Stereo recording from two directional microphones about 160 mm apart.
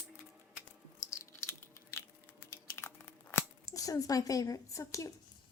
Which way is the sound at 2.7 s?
15° left (ahead or behind).